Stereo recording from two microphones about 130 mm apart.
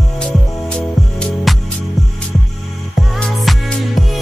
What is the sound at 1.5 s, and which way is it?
Music, centre (ahead or behind).